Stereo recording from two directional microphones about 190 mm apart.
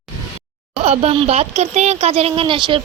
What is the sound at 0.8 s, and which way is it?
Speech, 35° right (ahead or behind).